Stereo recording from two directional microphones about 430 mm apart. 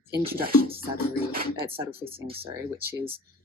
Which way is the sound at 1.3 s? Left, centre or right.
Centre.